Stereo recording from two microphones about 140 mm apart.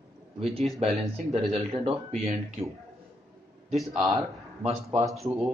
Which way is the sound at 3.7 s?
Centre (ahead or behind).